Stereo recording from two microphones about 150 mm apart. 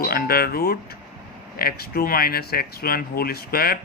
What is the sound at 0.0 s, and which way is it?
Speech, 85° left.